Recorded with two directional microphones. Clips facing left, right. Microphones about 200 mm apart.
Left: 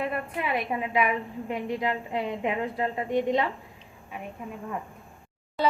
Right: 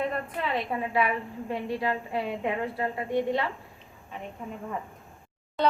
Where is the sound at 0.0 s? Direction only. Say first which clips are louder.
Even; 10° left (ahead or behind).